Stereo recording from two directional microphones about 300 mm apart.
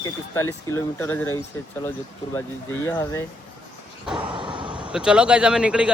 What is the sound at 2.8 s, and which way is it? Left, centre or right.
Speech, centre.